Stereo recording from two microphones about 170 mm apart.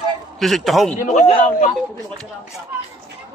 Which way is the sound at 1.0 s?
45° left (ahead or behind).